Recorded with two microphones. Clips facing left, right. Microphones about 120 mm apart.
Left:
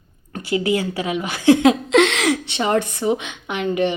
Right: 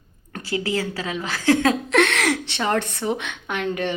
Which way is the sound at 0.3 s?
20° left (ahead or behind).